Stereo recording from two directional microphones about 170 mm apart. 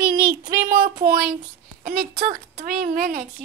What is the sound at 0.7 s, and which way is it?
A child's voice, 55° right (ahead or behind).